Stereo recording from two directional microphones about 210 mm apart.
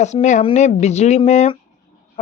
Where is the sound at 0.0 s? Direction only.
35° left (ahead or behind).